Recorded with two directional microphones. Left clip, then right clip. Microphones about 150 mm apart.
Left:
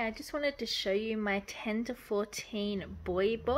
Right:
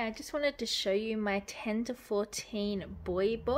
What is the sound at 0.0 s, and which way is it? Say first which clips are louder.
A woman's voice: right 1 dB; 5° right (ahead or behind).